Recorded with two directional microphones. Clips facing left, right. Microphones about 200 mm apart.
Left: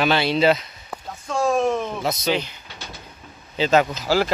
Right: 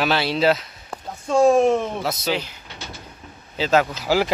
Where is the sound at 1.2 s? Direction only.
25° right (ahead or behind).